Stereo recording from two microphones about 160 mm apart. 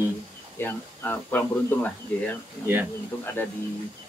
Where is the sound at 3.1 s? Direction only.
15° left (ahead or behind).